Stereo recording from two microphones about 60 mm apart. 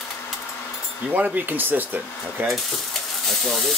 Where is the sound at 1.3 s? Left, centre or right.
Right.